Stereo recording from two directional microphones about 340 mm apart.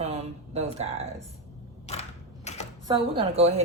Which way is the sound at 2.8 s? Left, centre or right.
Centre.